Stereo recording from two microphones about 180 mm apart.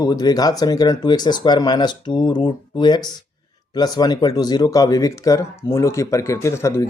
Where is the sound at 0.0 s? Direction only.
20° left (ahead or behind).